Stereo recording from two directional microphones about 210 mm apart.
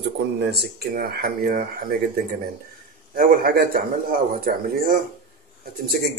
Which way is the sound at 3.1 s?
45° right (ahead or behind).